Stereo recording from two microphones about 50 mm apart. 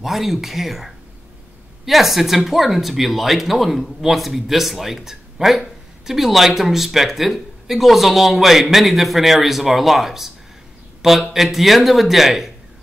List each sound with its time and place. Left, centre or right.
0.0 s speech: centre